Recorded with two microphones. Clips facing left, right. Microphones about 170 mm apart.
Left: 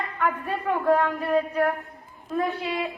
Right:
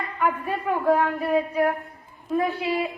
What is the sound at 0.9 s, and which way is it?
A woman's voice, 15° right (ahead or behind).